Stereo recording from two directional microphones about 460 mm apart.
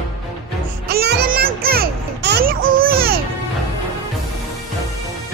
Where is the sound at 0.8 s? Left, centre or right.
Right.